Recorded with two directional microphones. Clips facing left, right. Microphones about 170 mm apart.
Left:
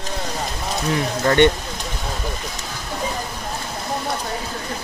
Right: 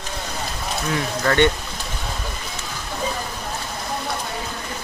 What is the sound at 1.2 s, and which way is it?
Speech, 20° left (ahead or behind).